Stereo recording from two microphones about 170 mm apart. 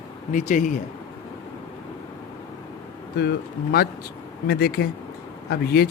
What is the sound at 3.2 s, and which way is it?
Speech, 70° left (ahead or behind).